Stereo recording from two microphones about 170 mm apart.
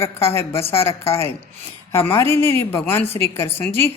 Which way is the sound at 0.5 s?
35° left (ahead or behind).